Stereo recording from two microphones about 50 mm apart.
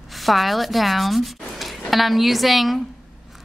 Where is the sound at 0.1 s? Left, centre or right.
Centre.